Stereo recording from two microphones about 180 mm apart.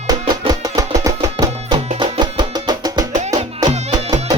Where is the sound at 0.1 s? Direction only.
20° right (ahead or behind).